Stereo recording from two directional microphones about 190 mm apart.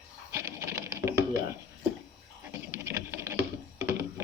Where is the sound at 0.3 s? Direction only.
15° right (ahead or behind).